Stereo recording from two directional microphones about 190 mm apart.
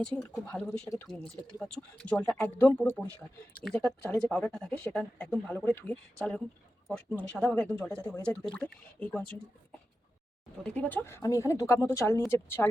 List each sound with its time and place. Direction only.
0.0 s speech: 5° left (ahead or behind)
10.6 s speech: 5° left (ahead or behind)